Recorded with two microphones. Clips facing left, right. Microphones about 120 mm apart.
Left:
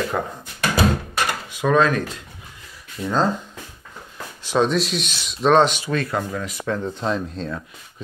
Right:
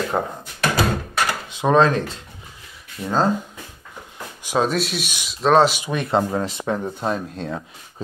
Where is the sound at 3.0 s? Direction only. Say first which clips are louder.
Even; 5° right (ahead or behind).